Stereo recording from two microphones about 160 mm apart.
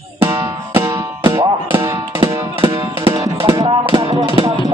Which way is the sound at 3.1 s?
20° right (ahead or behind).